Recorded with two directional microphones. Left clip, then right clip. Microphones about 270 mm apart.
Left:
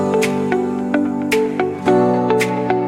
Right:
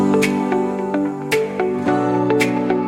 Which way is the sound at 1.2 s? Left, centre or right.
Centre.